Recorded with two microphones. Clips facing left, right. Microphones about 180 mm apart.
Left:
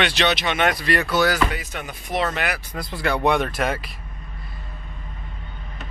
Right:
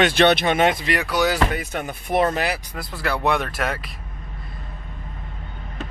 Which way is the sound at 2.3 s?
30° right (ahead or behind).